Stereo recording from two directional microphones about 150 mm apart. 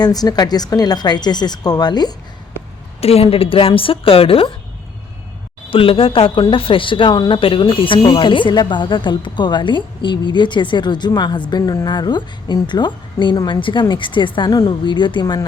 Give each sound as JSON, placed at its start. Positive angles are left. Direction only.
{"t": 0.0, "sound": "speech", "side_deg": 25}
{"t": 3.0, "sound": "a woman's voice", "side_deg": 40}
{"t": 5.7, "sound": "a woman's voice", "side_deg": 35}